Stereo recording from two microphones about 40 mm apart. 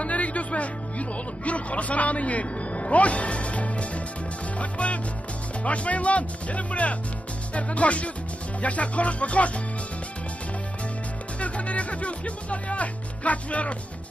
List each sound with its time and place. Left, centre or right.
0.0 s music: left
4.6 s speech: left
11.3 s speech: left